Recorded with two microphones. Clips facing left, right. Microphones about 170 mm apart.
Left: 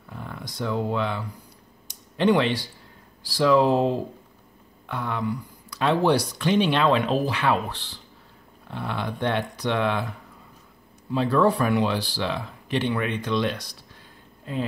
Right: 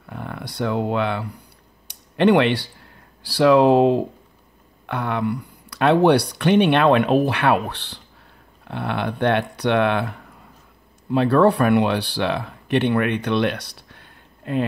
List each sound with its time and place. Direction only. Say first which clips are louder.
0.1 s speech: right 5 dB; 65° right (ahead or behind)
1.9 s a sound: right 4 dB; 65° right (ahead or behind)
3.2 s speech: right 5 dB; 70° right (ahead or behind)